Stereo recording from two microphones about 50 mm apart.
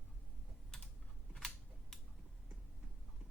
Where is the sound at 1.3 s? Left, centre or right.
Centre.